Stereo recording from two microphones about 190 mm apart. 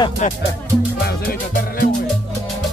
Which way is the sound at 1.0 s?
50° left (ahead or behind).